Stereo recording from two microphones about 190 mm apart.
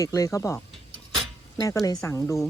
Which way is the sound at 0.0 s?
15° left (ahead or behind).